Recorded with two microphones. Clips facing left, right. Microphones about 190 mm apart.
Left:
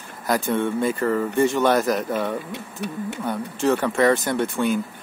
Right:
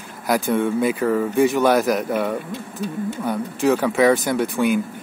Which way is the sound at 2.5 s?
65° left (ahead or behind).